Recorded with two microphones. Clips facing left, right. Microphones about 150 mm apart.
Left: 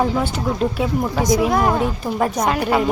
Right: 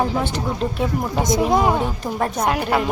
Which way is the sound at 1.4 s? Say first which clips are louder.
Right 3 dB; 20° right (ahead or behind).